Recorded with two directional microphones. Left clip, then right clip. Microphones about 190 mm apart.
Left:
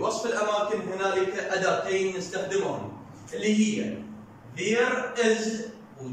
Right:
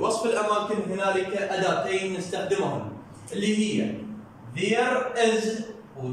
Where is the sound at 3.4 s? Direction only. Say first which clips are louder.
Left 1 dB; centre (ahead or behind).